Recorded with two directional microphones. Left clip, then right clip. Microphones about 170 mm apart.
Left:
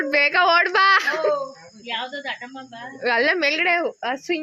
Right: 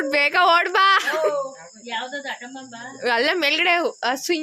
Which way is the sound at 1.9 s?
90° right.